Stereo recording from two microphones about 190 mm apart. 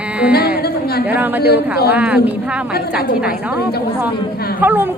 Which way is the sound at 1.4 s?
55° left (ahead or behind).